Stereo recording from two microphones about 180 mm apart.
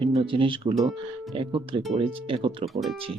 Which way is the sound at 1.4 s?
25° right (ahead or behind).